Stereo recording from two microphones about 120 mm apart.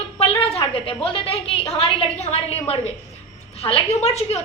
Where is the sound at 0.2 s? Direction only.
55° left (ahead or behind).